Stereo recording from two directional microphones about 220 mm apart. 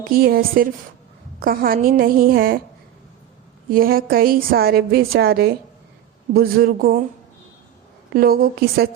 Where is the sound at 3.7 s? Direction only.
40° right (ahead or behind).